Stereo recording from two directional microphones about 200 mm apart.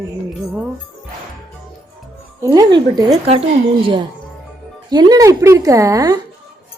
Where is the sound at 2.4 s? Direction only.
20° right (ahead or behind).